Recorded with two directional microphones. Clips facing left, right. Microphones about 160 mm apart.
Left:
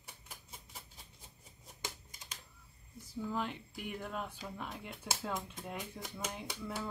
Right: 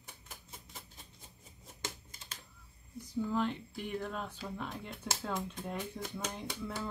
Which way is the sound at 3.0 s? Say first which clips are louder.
Right 5 dB; 5° left (ahead or behind).